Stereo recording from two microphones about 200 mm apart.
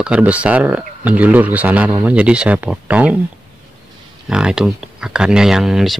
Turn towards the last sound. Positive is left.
turn(degrees=0)  # may be behind; listen again after turning